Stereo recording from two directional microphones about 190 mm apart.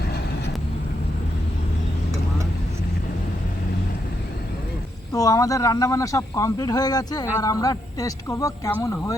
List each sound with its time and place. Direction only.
5.1 s speech: 20° left (ahead or behind)